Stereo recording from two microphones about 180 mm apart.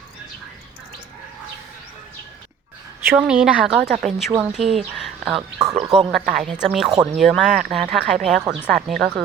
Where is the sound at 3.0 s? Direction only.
10° right (ahead or behind).